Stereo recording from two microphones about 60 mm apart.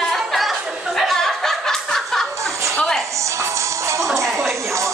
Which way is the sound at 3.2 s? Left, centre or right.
Right.